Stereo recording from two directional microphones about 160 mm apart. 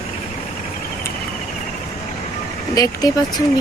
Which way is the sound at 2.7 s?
25° left (ahead or behind).